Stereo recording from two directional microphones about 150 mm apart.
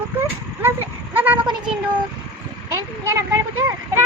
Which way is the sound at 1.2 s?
10° right (ahead or behind).